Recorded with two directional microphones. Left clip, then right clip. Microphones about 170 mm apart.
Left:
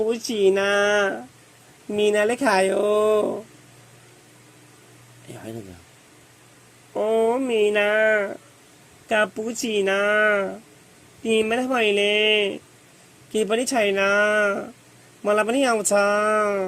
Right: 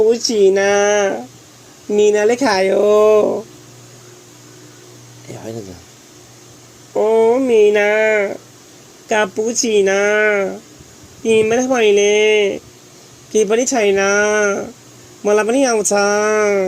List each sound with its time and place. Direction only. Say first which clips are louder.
0.1 s speech: right 8 dB; 45° left (ahead or behind)
6.9 s speech: right 8 dB; 45° left (ahead or behind)